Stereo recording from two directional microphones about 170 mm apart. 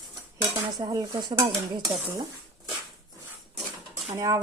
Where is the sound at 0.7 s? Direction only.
20° right (ahead or behind).